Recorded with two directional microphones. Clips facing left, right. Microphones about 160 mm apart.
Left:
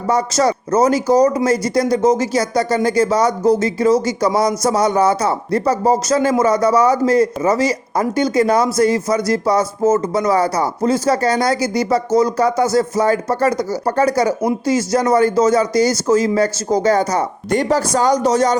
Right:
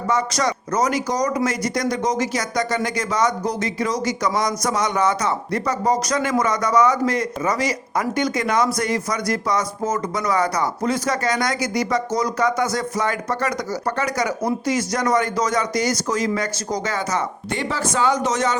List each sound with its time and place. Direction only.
0.1 s speech: 30° left (ahead or behind)